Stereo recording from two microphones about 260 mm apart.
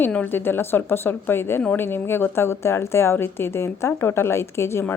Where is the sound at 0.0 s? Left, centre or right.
Centre.